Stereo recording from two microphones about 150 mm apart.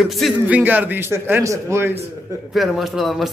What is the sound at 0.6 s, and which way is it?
A man's voice, 10° right (ahead or behind).